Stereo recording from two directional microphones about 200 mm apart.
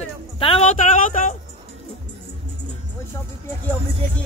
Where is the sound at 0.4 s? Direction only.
25° left (ahead or behind).